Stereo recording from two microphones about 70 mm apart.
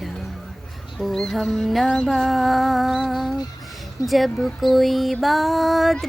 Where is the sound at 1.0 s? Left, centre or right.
Centre.